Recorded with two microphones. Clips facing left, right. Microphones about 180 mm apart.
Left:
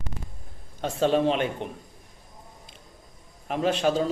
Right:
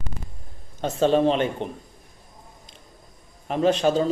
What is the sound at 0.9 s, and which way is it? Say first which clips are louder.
Speech: right 3 dB; 5° left (ahead or behind).